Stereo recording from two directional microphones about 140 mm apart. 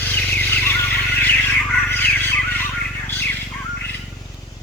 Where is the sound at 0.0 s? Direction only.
15° left (ahead or behind).